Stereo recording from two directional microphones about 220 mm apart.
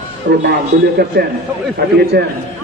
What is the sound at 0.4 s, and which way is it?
Speech, 50° right (ahead or behind).